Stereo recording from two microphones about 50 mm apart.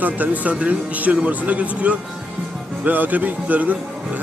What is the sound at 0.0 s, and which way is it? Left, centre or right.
A man's voice, right.